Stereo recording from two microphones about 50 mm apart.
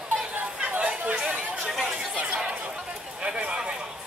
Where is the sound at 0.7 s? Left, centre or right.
Right.